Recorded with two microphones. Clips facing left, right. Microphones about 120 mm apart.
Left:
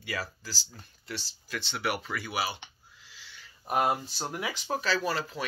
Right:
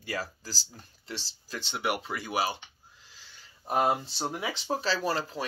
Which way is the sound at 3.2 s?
40° right (ahead or behind).